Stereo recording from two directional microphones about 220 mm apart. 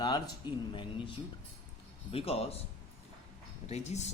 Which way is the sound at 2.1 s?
25° left (ahead or behind).